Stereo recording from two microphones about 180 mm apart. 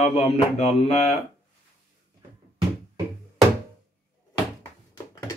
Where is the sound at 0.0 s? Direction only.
35° left (ahead or behind).